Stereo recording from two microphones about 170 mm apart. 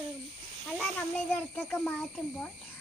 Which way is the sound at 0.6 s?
5° left (ahead or behind).